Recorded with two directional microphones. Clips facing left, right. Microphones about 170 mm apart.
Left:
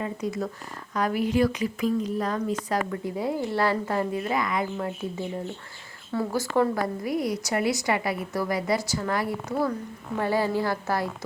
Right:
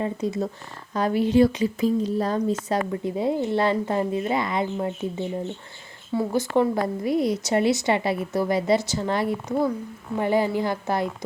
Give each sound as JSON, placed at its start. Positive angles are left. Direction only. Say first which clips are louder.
{"t": 0.0, "sound": "a woman's voice", "louder": "right 4 dB", "side_deg": -25}